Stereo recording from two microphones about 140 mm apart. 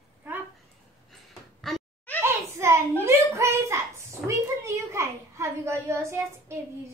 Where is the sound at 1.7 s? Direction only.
Centre (ahead or behind).